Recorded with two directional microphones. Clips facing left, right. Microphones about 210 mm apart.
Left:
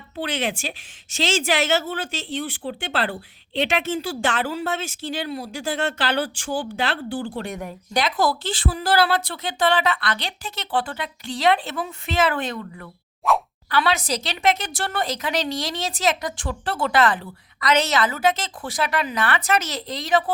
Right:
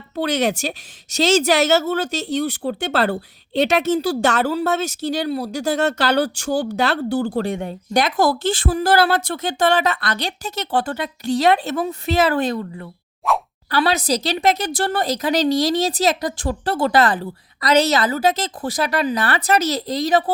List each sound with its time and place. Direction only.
0.2 s speech: 40° right (ahead or behind)
7.5 s speech: 30° right (ahead or behind)
7.9 s a woman's voice: 50° right (ahead or behind); by 12.9 s 30° right (ahead or behind)
13.2 s plop: centre (ahead or behind)
13.7 s speech: 35° right (ahead or behind)